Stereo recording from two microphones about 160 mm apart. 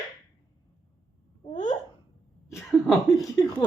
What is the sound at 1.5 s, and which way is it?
Babbling, 50° left (ahead or behind).